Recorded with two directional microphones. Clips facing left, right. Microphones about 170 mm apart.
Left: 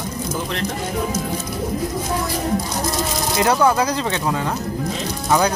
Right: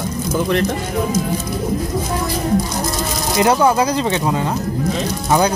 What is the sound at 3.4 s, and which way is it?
Speech, 20° right (ahead or behind).